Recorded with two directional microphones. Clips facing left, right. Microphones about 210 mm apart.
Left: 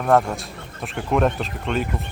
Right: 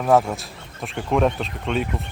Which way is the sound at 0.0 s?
Centre (ahead or behind).